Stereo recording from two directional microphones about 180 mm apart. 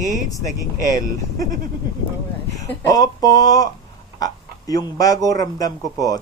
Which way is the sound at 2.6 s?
15° left (ahead or behind).